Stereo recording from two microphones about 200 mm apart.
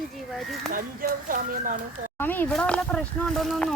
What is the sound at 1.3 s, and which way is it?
Speech, 45° right (ahead or behind).